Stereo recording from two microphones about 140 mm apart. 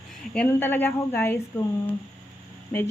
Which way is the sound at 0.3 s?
15° left (ahead or behind).